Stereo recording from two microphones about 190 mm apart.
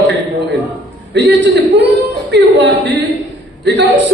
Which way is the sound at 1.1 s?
70° right (ahead or behind).